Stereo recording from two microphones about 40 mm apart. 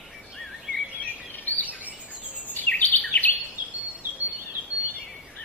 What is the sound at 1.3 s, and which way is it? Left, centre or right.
Bird vocalization, left.